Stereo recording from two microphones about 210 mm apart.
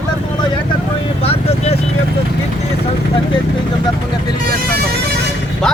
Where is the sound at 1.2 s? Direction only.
30° left (ahead or behind).